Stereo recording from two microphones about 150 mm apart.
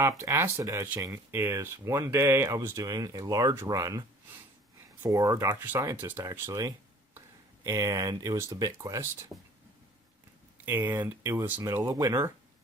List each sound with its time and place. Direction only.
0.0 s speech: 20° right (ahead or behind)
10.7 s speech: 15° right (ahead or behind)